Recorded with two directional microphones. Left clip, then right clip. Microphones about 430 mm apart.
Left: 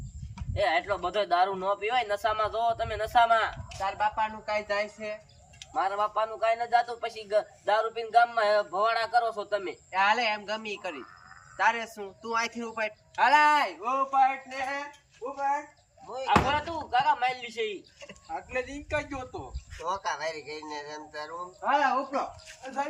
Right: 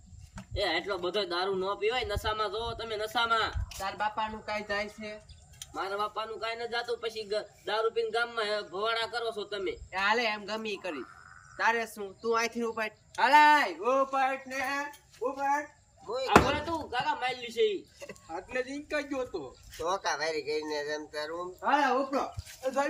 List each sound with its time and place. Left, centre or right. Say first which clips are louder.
0.5 s a man's voice: left 4 dB; centre
16.0 s speech: right 1 dB; centre